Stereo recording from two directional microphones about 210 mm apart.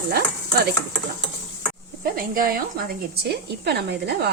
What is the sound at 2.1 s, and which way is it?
A woman's voice, 45° right (ahead or behind).